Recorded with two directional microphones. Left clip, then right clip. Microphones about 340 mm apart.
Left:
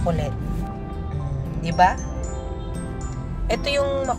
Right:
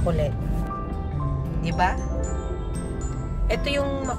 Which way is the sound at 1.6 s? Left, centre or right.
Centre.